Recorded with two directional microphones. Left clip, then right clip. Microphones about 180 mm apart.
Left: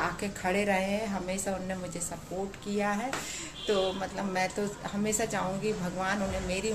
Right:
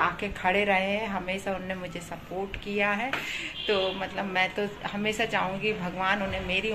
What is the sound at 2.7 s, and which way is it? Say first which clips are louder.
A woman's voice: right 4 dB; 10° left (ahead or behind).